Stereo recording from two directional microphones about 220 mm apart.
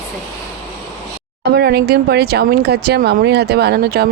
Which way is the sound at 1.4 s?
45° right (ahead or behind).